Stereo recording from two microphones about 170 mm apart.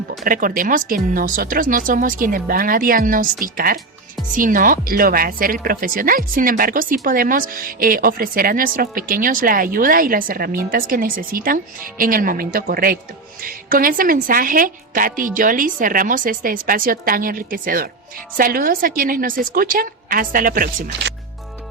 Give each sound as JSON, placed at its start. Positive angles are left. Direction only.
{"t": 0.3, "sound": "speech", "side_deg": -55}